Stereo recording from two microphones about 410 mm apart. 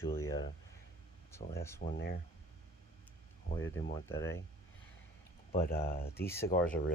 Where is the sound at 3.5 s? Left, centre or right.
Left.